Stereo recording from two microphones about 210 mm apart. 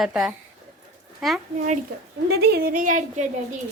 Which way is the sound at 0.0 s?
5° right (ahead or behind).